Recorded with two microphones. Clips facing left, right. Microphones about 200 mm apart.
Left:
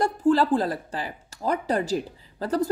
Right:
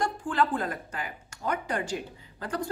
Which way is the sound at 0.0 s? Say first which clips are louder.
Left 7 dB; 35° left (ahead or behind).